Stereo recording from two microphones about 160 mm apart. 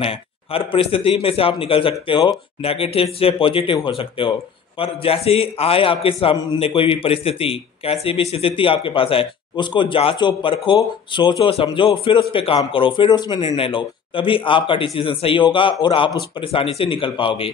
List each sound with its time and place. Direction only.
0.0 s a man's voice: 35° left (ahead or behind)